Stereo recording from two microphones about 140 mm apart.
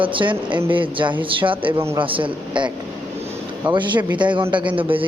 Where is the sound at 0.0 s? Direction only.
35° right (ahead or behind).